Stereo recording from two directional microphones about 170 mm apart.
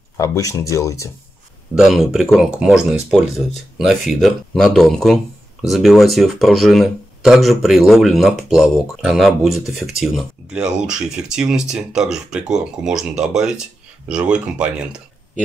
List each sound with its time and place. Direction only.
0.2 s speech: 20° left (ahead or behind)
1.8 s speech: centre (ahead or behind)